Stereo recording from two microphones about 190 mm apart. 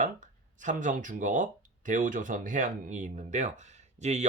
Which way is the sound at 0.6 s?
40° right (ahead or behind).